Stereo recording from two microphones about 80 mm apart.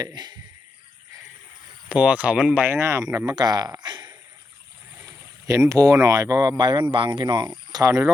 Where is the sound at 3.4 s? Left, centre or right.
Right.